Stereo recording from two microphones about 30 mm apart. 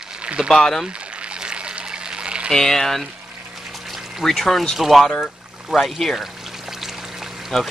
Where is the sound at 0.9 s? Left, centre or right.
Right.